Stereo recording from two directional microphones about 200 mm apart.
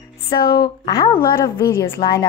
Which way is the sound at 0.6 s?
20° left (ahead or behind).